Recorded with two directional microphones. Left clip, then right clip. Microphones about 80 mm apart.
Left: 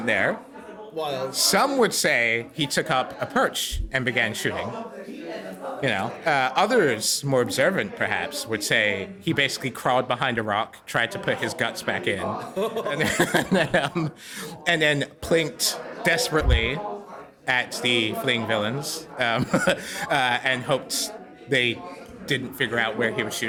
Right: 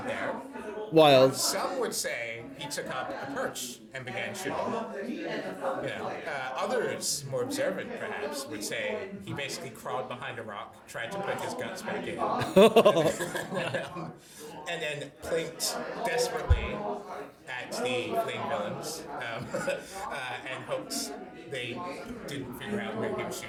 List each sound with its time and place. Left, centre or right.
0.9 s music: right
1.3 s a man's voice: left
5.8 s a man's voice: left
12.4 s a man's voice: right
13.0 s a man's voice: left
22.3 s speech: left